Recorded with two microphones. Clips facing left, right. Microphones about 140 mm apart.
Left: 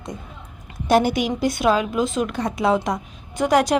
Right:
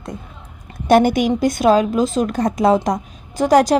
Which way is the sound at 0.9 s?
55° right (ahead or behind).